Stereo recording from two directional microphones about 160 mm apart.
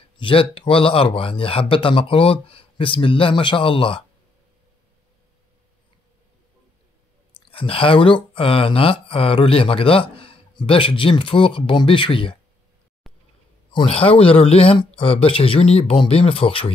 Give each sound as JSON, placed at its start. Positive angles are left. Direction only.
{"t": 0.2, "sound": "speech", "side_deg": 35}
{"t": 7.3, "sound": "speech", "side_deg": 35}
{"t": 13.0, "sound": "a sound", "side_deg": 0}
{"t": 13.7, "sound": "speech", "side_deg": 35}